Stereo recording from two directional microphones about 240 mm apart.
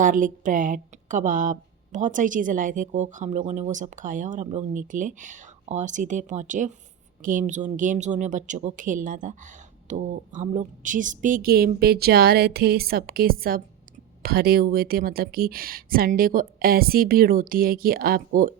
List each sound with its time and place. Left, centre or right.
0.0 s a woman's voice: right